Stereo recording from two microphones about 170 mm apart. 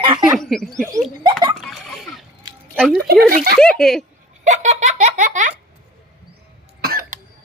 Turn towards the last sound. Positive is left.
turn(degrees=-60)  # may be behind; listen again after turning